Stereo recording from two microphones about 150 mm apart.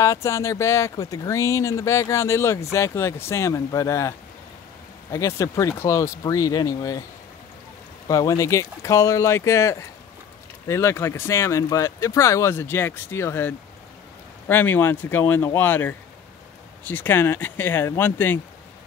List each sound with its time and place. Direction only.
0.0 s speech: 20° left (ahead or behind)
5.1 s speech: 20° left (ahead or behind)
8.1 s speech: 25° left (ahead or behind)